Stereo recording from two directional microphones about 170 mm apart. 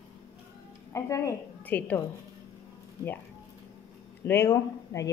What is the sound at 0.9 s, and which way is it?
Speech, 15° left (ahead or behind).